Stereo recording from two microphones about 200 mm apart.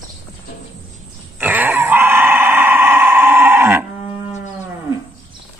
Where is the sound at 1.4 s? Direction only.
10° right (ahead or behind).